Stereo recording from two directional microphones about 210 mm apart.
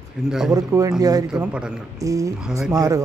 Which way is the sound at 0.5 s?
15° right (ahead or behind).